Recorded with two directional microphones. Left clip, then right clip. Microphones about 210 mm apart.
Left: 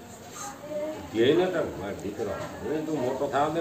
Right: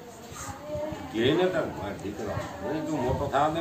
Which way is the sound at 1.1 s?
40° right (ahead or behind).